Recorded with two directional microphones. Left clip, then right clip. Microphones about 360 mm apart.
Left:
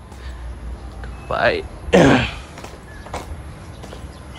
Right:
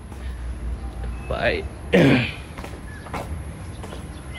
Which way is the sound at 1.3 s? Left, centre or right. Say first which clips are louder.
Left 5 dB; centre.